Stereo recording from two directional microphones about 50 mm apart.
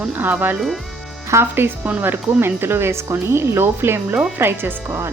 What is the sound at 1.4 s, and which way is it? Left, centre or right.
Speech, right.